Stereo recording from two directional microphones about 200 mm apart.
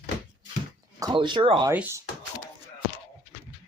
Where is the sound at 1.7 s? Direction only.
10° right (ahead or behind).